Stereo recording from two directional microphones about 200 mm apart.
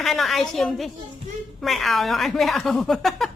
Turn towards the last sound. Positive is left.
turn(degrees=0)  # may be behind; listen again after turning